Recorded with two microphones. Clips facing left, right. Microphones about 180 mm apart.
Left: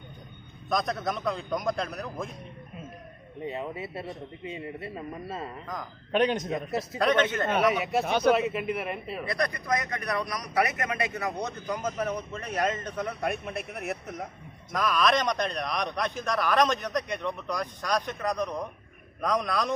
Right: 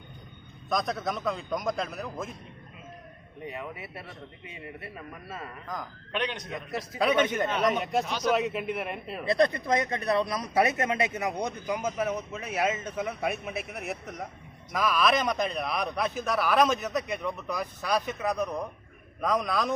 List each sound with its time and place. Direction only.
0.7 s a man's voice: centre (ahead or behind)
3.4 s a man's voice: 25° left (ahead or behind)
6.1 s a man's voice: 45° left (ahead or behind)
6.5 s a man's voice: 25° left (ahead or behind)
7.0 s a man's voice: 10° right (ahead or behind)
7.5 s a man's voice: 5° left (ahead or behind)
8.0 s a man's voice: 60° left (ahead or behind)
8.3 s a man's voice: centre (ahead or behind)
9.2 s a man's voice: 25° right (ahead or behind); by 19.7 s centre (ahead or behind)